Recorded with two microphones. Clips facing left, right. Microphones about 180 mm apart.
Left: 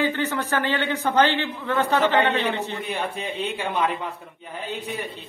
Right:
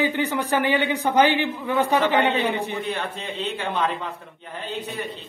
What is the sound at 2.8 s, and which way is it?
A man's voice, 10° left (ahead or behind).